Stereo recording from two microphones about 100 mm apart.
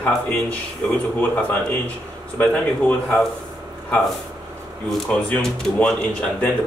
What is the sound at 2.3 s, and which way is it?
Speech, 15° left (ahead or behind).